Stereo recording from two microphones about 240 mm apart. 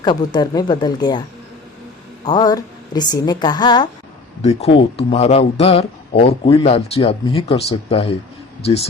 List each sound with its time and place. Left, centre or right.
0.0 s a woman's voice: centre
2.2 s a woman's voice: centre